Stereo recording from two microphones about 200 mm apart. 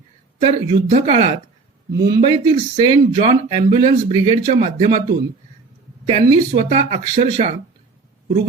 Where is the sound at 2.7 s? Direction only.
20° right (ahead or behind).